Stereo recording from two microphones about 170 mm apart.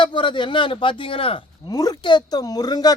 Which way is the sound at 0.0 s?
30° left (ahead or behind).